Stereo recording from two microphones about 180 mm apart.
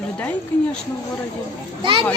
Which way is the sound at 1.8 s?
30° right (ahead or behind).